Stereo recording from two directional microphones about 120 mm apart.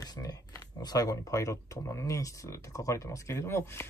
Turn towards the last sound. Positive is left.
turn(degrees=20)  # may be behind; listen again after turning